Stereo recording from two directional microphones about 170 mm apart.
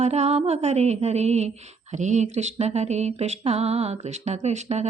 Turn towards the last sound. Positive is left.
turn(degrees=-40)  # may be behind; listen again after turning